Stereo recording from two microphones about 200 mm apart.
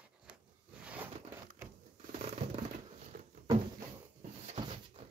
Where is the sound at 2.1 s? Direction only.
35° right (ahead or behind).